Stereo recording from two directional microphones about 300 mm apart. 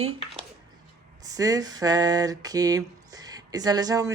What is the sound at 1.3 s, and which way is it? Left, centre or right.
Speech, centre.